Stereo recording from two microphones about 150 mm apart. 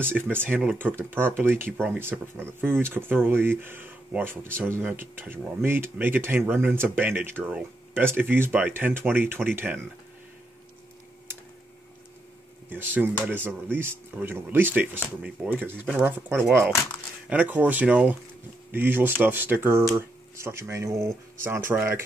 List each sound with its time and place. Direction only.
0.0 s speech: 15° right (ahead or behind)
12.6 s speech: 15° right (ahead or behind)